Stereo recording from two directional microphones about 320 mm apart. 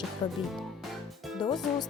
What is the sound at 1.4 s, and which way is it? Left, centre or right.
Speech, centre.